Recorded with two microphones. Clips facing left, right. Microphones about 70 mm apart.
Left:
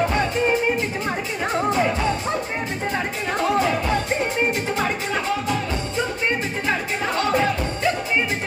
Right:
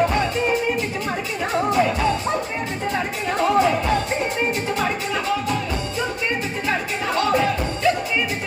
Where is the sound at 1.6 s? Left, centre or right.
Left.